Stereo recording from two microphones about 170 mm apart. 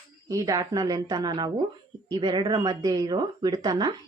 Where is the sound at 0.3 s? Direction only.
20° right (ahead or behind).